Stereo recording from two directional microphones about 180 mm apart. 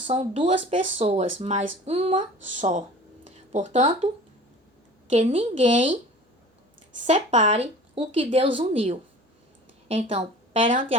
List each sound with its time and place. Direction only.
0.1 s a woman's voice: 30° right (ahead or behind)
7.1 s a woman's voice: 40° right (ahead or behind)